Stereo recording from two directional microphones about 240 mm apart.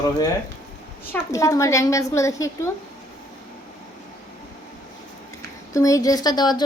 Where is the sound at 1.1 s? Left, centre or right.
Centre.